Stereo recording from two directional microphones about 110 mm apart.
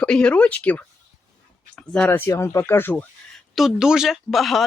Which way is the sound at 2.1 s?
25° left (ahead or behind).